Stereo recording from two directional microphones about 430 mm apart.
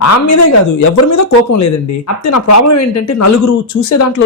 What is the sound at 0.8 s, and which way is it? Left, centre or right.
Speech, left.